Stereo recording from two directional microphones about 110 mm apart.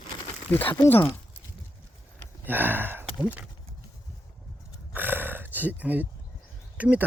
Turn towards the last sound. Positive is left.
turn(degrees=-15)  # may be behind; listen again after turning